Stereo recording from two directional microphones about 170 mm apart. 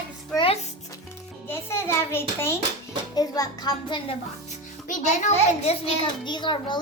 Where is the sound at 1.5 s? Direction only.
15° left (ahead or behind).